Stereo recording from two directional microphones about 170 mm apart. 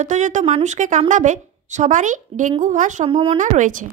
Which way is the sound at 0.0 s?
45° right (ahead or behind).